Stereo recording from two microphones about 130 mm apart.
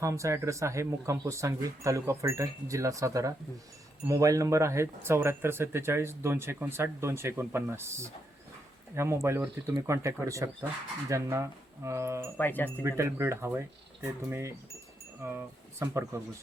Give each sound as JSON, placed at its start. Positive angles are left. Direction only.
{"t": 0.0, "sound": "speech", "side_deg": -25}
{"t": 12.4, "sound": "speech", "side_deg": 15}
{"t": 12.8, "sound": "speech", "side_deg": -20}